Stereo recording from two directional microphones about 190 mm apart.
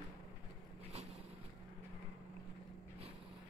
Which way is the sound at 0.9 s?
35° right (ahead or behind).